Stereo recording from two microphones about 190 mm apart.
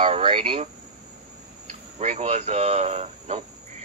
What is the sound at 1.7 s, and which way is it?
Speech, 40° right (ahead or behind).